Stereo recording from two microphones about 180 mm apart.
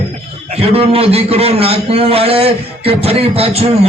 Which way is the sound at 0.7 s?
30° right (ahead or behind).